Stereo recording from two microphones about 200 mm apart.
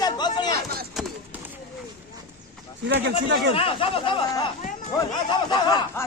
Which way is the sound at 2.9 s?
60° right (ahead or behind).